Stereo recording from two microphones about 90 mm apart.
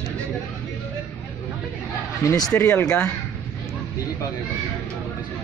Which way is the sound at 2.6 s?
25° left (ahead or behind).